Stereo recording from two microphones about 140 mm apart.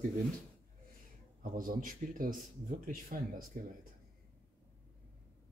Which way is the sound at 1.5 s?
80° right.